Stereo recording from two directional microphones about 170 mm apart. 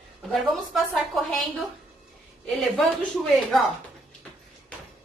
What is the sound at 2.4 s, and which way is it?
A woman's voice, centre (ahead or behind).